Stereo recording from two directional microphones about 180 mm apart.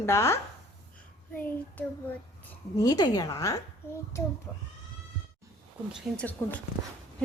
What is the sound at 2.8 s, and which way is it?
A child's voice, 20° left (ahead or behind).